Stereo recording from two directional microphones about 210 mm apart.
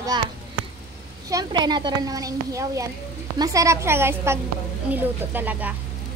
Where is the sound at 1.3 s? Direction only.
20° right (ahead or behind).